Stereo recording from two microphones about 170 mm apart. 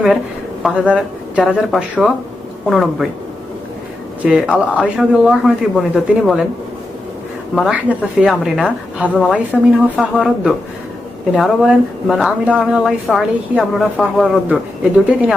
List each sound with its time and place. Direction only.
0.6 s speech: 5° right (ahead or behind)
4.2 s speech: 5° right (ahead or behind)
7.5 s speech: 5° right (ahead or behind)